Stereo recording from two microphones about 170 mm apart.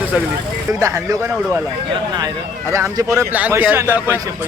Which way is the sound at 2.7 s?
20° right (ahead or behind).